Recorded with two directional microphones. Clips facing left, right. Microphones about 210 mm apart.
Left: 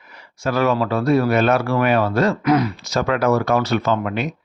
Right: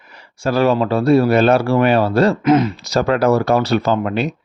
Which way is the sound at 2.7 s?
35° right (ahead or behind).